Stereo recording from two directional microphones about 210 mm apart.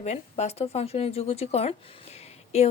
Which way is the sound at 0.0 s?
30° left (ahead or behind).